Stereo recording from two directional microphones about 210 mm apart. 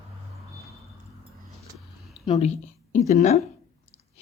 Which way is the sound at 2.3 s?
30° left (ahead or behind).